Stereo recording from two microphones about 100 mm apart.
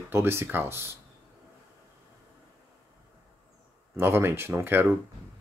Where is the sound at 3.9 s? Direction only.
25° right (ahead or behind).